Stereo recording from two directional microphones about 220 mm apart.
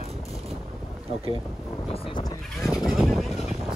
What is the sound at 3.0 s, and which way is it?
Speech, centre (ahead or behind).